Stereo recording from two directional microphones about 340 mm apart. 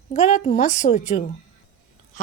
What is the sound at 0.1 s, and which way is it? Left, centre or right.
A woman's voice, left.